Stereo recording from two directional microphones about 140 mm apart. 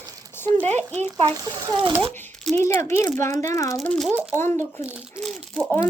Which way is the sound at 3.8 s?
10° left (ahead or behind).